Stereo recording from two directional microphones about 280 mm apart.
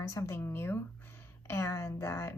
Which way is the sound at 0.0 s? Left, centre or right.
Centre.